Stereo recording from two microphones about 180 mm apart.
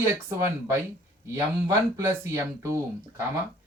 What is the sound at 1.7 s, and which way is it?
Speech, 15° right (ahead or behind).